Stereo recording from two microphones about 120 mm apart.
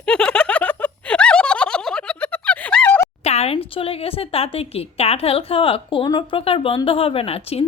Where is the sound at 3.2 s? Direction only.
65° left (ahead or behind).